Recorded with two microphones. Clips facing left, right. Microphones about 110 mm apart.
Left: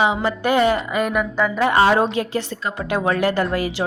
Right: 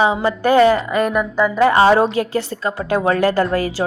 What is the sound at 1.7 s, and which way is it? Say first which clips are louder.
A woman's voice: right 3 dB; 30° right (ahead or behind).